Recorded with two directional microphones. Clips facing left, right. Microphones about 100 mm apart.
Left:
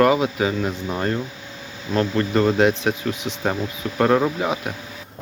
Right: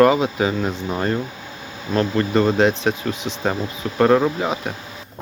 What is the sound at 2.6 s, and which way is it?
Speech, 10° left (ahead or behind).